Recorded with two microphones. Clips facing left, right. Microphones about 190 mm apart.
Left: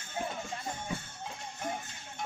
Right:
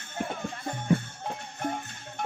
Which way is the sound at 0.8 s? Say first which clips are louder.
Right 12 dB; 60° right (ahead or behind).